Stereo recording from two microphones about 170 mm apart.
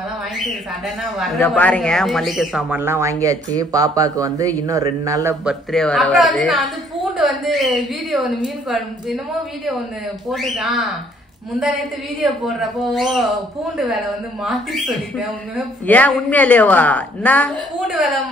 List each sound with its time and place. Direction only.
1.0 s a man's voice: centre (ahead or behind); by 5.3 s 20° right (ahead or behind)
5.4 s a man's voice: centre (ahead or behind)
10.3 s a man's voice: centre (ahead or behind)
15.9 s a woman's voice: 10° left (ahead or behind)